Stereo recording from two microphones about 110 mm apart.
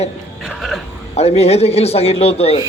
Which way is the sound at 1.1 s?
70° left (ahead or behind).